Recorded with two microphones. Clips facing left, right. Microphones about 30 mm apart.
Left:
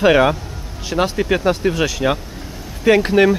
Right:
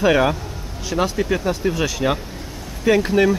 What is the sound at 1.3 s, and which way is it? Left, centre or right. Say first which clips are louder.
Speech: left 4 dB; left.